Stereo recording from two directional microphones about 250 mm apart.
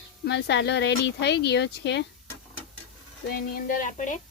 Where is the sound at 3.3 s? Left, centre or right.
Left.